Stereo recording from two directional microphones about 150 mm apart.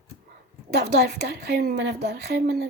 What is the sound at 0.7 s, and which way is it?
A woman's voice, 90° right.